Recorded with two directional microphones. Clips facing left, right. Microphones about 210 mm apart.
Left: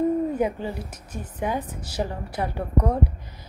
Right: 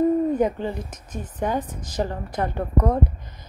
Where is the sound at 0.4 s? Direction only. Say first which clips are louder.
Right 3 dB; 10° left (ahead or behind).